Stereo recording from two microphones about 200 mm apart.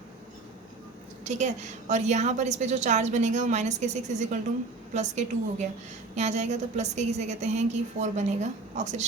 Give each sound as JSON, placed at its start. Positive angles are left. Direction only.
{"t": 1.2, "sound": "a woman's voice", "side_deg": -35}